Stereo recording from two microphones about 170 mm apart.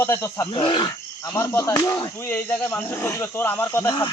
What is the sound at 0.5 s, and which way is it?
Speech, 25° left (ahead or behind).